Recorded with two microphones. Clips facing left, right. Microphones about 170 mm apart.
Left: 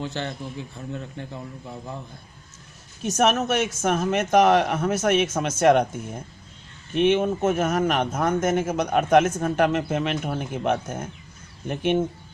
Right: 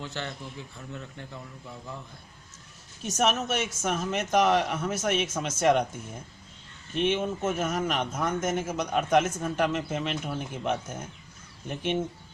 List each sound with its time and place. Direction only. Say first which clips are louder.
0.0 s a man's voice: left 6 dB; 25° left (ahead or behind)
3.0 s speech: left 5 dB; 60° left (ahead or behind)